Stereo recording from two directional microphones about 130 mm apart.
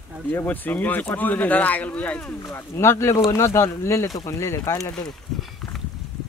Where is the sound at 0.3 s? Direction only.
15° left (ahead or behind).